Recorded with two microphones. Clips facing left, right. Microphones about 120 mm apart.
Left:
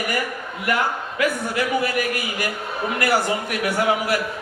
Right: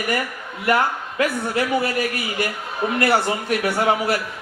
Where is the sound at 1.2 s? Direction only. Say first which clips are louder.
Right 1 dB; 30° right (ahead or behind).